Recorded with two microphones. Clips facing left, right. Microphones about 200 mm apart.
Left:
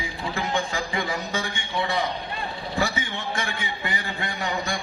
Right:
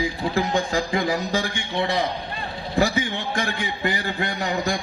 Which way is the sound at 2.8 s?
35° right (ahead or behind).